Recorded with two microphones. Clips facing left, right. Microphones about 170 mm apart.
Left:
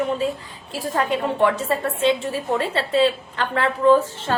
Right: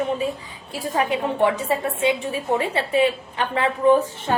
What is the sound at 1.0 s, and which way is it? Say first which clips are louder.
A woman's voice: even; 15° right (ahead or behind).